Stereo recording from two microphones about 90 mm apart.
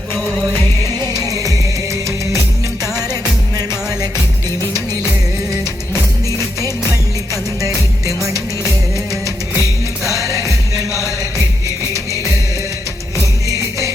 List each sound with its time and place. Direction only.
1.3 s music: 35° right (ahead or behind)
7.6 s music: 35° right (ahead or behind)
9.2 s music: 35° right (ahead or behind)
13.5 s music: 35° right (ahead or behind)